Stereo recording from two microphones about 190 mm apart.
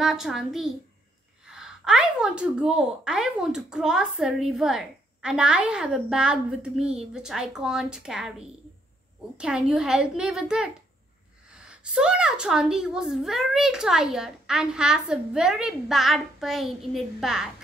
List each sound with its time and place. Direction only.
0.0 s speech: centre (ahead or behind)